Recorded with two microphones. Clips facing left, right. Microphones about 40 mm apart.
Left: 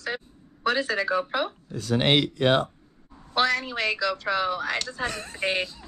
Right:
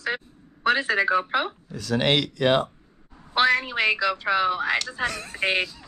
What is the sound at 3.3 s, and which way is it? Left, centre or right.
Speech, right.